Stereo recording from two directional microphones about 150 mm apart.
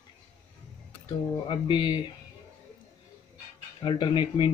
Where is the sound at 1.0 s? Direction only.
30° left (ahead or behind).